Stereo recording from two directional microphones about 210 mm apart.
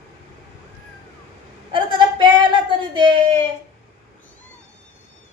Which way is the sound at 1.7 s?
20° right (ahead or behind).